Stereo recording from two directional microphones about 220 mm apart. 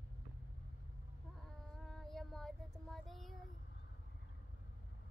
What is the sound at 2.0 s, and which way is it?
Child singing, centre (ahead or behind).